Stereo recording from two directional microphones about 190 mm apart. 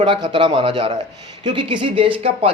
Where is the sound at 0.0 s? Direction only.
25° right (ahead or behind).